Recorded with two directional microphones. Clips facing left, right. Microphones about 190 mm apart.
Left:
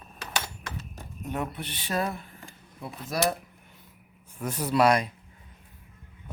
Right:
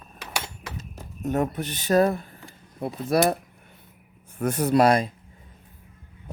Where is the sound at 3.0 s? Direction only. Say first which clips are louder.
Right 7 dB; 60° right (ahead or behind).